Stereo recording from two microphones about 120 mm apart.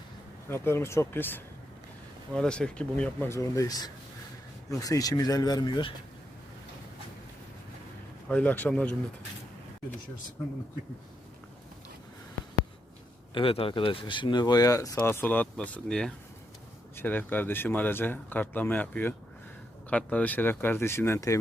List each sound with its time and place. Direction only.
0.4 s speech: 20° left (ahead or behind)
2.3 s speech: 5° left (ahead or behind)
3.2 s speech: 25° left (ahead or behind)
8.3 s speech: 10° left (ahead or behind)
13.3 s speech: 50° left (ahead or behind); by 15.0 s 30° left (ahead or behind)
15.0 s speech: 15° left (ahead or behind)
16.9 s speech: 15° left (ahead or behind)